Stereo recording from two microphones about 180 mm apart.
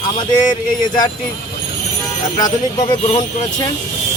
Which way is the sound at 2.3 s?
20° left (ahead or behind).